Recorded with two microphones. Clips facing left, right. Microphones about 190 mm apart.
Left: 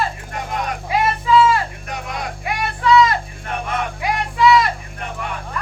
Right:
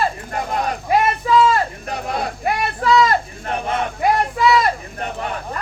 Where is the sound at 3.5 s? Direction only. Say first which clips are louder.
Right 2 dB; 30° right (ahead or behind).